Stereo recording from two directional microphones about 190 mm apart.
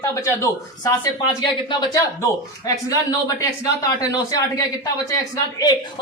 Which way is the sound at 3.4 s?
20° left (ahead or behind).